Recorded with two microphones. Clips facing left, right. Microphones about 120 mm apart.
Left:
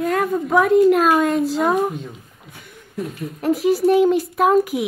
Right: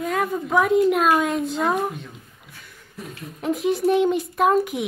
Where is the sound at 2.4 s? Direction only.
50° left (ahead or behind).